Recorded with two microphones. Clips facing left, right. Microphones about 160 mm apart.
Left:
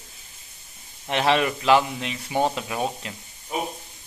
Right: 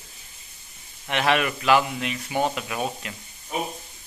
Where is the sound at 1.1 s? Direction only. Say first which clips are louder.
Left 2 dB; 30° left (ahead or behind).